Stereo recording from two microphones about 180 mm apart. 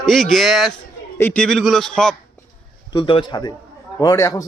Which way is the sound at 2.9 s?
30° left (ahead or behind).